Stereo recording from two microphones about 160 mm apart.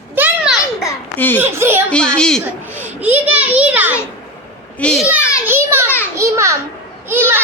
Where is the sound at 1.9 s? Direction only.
5° left (ahead or behind).